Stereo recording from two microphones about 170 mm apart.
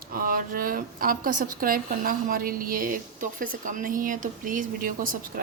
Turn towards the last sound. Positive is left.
turn(degrees=-55)  # may be behind; listen again after turning